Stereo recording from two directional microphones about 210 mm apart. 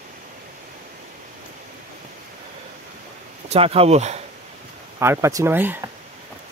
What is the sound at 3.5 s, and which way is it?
Speech, 30° right (ahead or behind).